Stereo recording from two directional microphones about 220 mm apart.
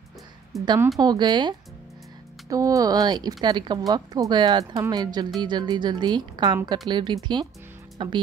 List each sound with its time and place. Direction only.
0.5 s a woman's voice: centre (ahead or behind)
0.9 s a woman's voice: 20° right (ahead or behind)
2.5 s a woman's voice: 15° right (ahead or behind)